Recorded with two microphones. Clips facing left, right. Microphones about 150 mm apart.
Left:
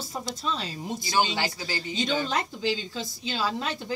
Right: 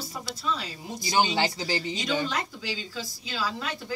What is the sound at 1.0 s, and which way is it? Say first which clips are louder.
Speech: right 2 dB; 20° right (ahead or behind).